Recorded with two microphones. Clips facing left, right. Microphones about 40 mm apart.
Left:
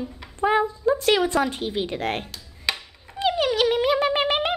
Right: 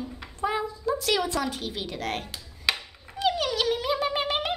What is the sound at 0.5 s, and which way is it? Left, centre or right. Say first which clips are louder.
A woman's voice: left 9 dB; left.